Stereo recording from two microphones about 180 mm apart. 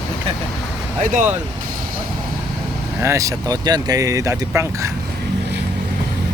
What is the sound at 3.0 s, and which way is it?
Speech, 15° right (ahead or behind).